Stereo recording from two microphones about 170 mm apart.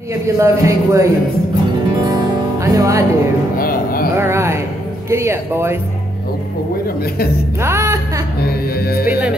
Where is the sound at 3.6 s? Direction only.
60° left (ahead or behind).